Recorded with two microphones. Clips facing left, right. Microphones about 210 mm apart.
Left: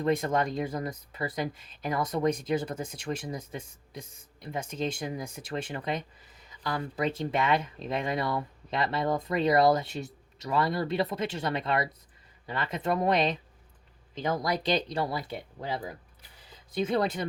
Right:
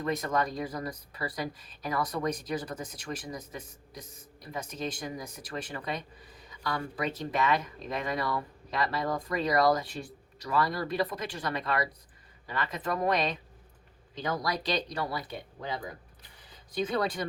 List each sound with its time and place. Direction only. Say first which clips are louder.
0.0 s speech: left 3 dB; 30° left (ahead or behind)